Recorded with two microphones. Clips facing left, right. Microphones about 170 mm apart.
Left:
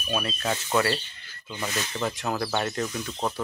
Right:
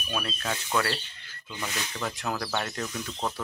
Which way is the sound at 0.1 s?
10° left (ahead or behind).